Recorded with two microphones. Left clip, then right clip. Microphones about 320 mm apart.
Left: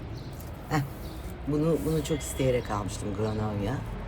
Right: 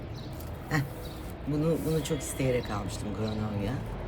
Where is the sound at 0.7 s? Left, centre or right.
Centre.